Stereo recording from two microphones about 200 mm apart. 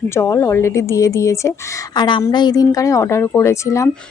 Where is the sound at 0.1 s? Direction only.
15° left (ahead or behind).